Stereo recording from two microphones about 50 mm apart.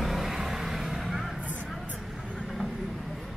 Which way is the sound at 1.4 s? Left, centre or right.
Right.